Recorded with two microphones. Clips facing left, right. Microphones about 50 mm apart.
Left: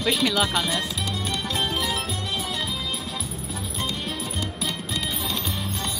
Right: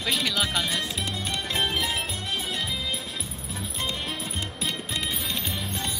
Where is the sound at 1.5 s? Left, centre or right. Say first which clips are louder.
Even; right.